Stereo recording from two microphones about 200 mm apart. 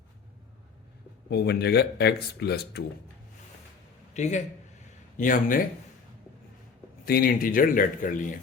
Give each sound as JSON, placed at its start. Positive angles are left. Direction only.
{"t": 1.3, "sound": "speech", "side_deg": 55}
{"t": 4.1, "sound": "a man's voice", "side_deg": 35}
{"t": 7.0, "sound": "speech", "side_deg": 50}